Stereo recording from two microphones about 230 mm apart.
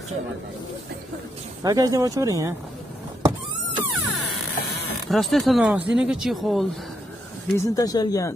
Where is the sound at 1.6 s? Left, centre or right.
Centre.